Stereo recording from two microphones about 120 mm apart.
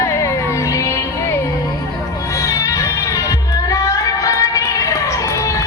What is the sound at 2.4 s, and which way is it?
Crowd, 25° left (ahead or behind).